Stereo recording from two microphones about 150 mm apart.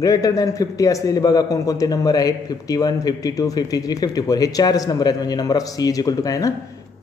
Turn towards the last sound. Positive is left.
turn(degrees=25)  # may be behind; listen again after turning